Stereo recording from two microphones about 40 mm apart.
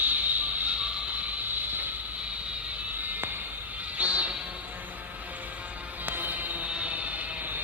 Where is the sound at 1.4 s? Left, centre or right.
Right.